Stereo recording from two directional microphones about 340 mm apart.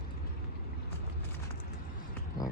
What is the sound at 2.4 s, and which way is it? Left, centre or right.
Speech, left.